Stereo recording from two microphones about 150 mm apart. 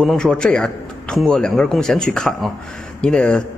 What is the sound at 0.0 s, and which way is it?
A man's voice, 5° left (ahead or behind).